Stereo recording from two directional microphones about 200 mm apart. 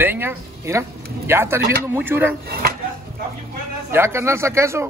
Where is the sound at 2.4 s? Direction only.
50° right (ahead or behind).